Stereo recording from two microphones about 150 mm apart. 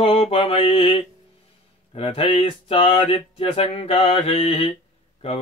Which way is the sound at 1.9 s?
40° left (ahead or behind).